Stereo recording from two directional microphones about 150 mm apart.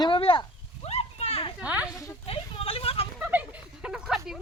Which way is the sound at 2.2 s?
40° left (ahead or behind).